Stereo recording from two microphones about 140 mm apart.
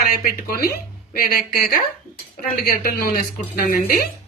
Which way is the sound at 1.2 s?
90° left.